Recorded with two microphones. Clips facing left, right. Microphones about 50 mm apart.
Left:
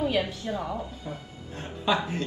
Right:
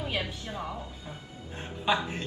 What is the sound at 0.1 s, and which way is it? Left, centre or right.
Speech, right.